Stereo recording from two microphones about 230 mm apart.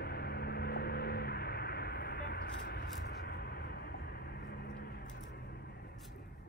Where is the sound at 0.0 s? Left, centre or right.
Left.